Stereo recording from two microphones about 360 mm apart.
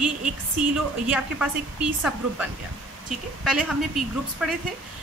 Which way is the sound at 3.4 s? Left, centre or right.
Centre.